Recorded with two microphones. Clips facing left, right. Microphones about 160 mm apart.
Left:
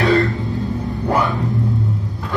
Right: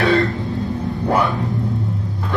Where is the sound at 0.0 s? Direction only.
Centre (ahead or behind).